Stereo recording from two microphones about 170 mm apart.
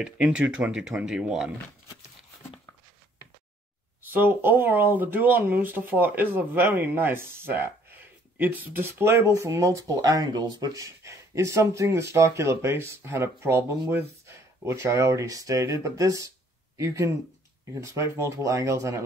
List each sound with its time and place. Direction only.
0.0 s speech: 5° right (ahead or behind)
4.0 s speech: 10° right (ahead or behind)